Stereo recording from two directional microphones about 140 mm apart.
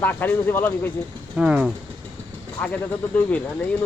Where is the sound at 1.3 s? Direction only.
5° right (ahead or behind).